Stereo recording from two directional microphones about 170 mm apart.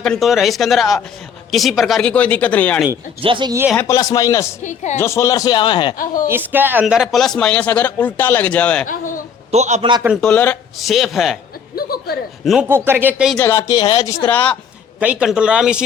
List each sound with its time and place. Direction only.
0.0 s speech: centre (ahead or behind)
3.2 s speech: 30° right (ahead or behind)
3.8 s a man's voice: 20° left (ahead or behind)
4.6 s speech: 45° left (ahead or behind)
4.9 s a man's voice: 15° left (ahead or behind)
6.2 s speech: 10° right (ahead or behind); by 8.9 s 5° left (ahead or behind)
8.9 s speech: 50° left (ahead or behind)
9.5 s a man's voice: 40° right (ahead or behind)
10.2 s speech: 5° left (ahead or behind)
11.8 s speech: 60° left (ahead or behind)
12.5 s speech: 10° right (ahead or behind)
13.3 s a man's voice: 15° left (ahead or behind)
14.3 s speech: 10° left (ahead or behind)
14.9 s speech: 10° right (ahead or behind)